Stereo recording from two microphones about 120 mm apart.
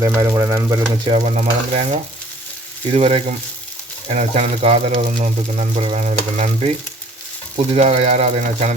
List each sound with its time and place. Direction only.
0.0 s speech: 25° right (ahead or behind)
1.2 s speech: 70° right (ahead or behind)
2.9 s speech: 60° right (ahead or behind)
4.1 s speech: 70° right (ahead or behind); by 6.7 s 90° right
7.5 s speech: 70° right (ahead or behind)